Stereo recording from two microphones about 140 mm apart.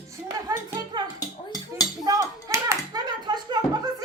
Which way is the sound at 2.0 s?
25° right (ahead or behind).